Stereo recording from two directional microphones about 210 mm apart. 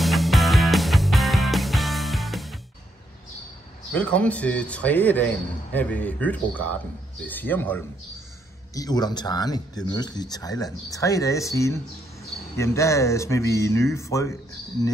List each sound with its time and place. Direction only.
0.0 s music: centre (ahead or behind)
3.9 s speech: 5° left (ahead or behind)